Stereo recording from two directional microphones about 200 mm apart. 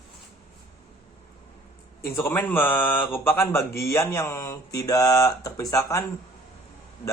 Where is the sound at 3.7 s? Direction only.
50° left (ahead or behind).